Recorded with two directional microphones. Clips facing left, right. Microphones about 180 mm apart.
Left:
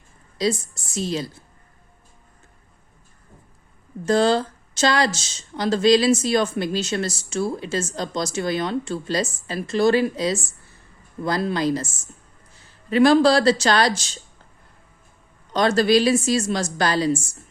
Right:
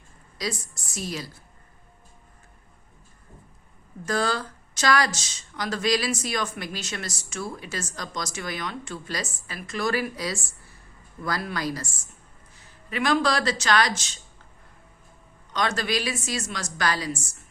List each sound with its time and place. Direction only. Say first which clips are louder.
0.3 s speech: left 9 dB; 25° left (ahead or behind)
4.0 s speech: left 8 dB; 25° left (ahead or behind)
15.5 s speech: left 10 dB; 35° left (ahead or behind)